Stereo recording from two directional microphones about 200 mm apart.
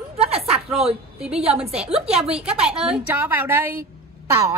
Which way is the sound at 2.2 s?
5° right (ahead or behind).